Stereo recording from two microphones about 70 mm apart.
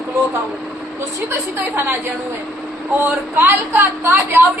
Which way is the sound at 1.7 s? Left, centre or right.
Right.